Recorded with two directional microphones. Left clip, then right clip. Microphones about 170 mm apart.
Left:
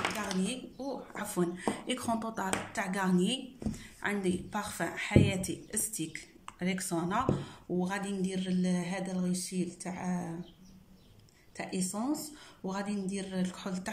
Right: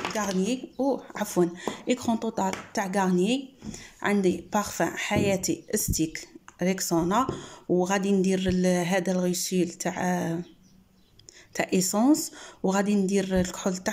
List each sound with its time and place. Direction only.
0.4 s a woman's voice: 40° right (ahead or behind)
11.5 s speech: 55° right (ahead or behind)